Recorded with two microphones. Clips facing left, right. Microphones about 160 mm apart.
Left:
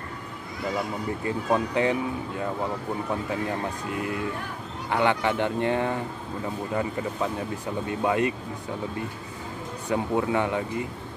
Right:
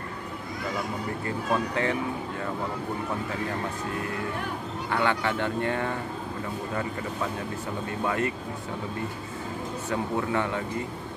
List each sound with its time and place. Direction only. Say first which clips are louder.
1.2 s speech: left 3 dB; 15° left (ahead or behind)
4.9 s speech: left 3 dB; 20° left (ahead or behind)
8.0 s speech: left 4 dB; 20° left (ahead or behind)
9.8 s speech: left 4 dB; 15° left (ahead or behind)